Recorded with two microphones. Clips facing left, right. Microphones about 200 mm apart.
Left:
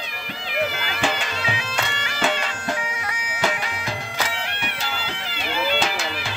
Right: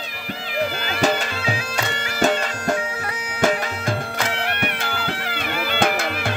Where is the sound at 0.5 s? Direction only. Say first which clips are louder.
Right 2 dB; 35° right (ahead or behind).